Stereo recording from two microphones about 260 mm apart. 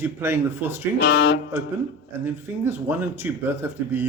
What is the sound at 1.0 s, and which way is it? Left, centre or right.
Speech, left.